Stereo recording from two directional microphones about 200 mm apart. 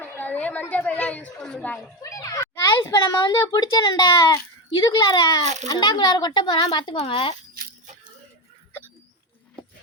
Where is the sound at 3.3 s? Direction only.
20° left (ahead or behind).